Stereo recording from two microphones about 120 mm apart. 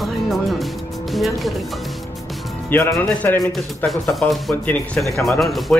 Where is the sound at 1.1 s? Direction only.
Centre (ahead or behind).